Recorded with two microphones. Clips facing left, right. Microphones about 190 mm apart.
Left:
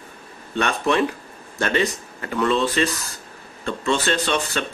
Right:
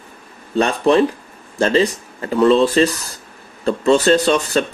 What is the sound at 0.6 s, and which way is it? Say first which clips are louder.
Speech: right 6 dB; 35° right (ahead or behind).